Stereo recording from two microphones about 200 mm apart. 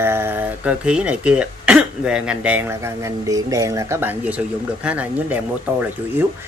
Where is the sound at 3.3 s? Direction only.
15° right (ahead or behind).